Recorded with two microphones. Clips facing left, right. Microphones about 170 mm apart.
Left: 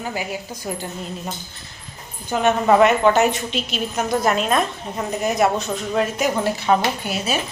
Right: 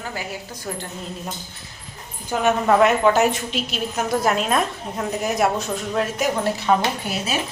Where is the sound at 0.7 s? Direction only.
15° left (ahead or behind).